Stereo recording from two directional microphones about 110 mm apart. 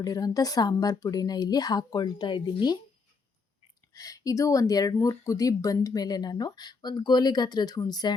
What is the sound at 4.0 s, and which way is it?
Speech, 30° left (ahead or behind).